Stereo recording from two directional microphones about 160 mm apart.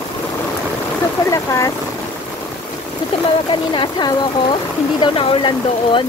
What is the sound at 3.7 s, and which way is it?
Speech, 30° left (ahead or behind).